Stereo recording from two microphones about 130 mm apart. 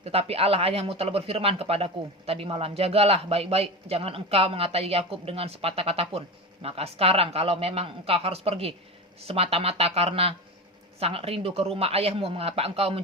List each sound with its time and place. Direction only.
0.0 s speech: 50° right (ahead or behind)